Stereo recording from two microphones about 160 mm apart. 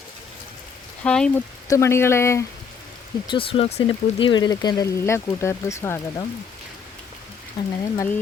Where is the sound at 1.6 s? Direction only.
20° left (ahead or behind).